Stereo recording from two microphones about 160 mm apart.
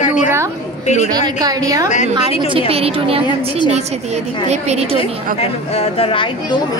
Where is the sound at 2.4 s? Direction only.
35° right (ahead or behind).